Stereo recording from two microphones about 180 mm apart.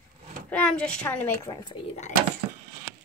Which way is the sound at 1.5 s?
20° left (ahead or behind).